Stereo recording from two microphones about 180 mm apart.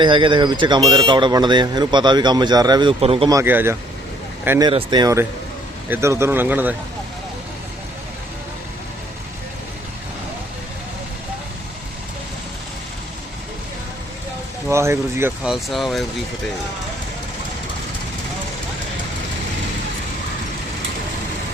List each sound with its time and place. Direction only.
0.0 s speech: 25° right (ahead or behind)
3.3 s speech: 10° right (ahead or behind)
14.7 s speech: 15° right (ahead or behind)
15.4 s speech: centre (ahead or behind)